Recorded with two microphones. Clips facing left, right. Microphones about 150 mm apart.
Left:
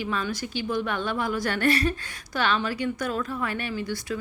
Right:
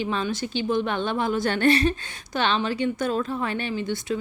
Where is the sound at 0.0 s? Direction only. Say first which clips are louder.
Right 3 dB; 25° right (ahead or behind).